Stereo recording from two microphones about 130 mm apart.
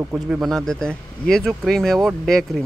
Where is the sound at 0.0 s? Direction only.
15° right (ahead or behind).